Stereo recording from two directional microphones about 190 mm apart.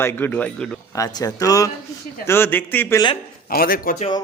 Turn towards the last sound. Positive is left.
turn(degrees=50)  # may be behind; listen again after turning